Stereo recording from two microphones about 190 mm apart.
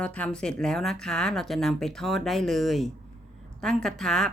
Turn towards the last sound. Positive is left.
turn(degrees=0)  # may be behind; listen again after turning